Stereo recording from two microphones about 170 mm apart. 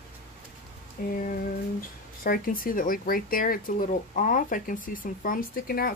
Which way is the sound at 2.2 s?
60° left (ahead or behind).